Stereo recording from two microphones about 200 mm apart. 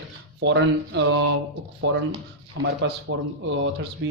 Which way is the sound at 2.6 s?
60° right (ahead or behind).